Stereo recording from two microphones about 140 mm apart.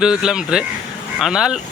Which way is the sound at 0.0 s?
5° right (ahead or behind).